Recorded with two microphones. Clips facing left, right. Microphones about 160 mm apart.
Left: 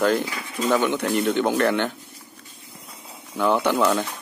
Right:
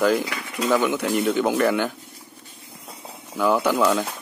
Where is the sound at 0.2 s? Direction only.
75° right (ahead or behind).